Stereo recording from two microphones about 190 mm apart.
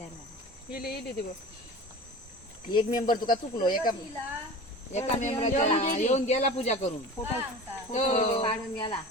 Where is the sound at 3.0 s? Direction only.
45° left (ahead or behind).